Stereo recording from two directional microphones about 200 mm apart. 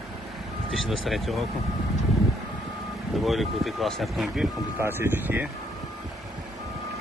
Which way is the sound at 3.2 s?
Centre (ahead or behind).